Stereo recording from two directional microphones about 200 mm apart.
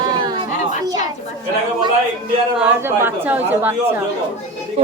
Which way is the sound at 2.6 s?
10° right (ahead or behind).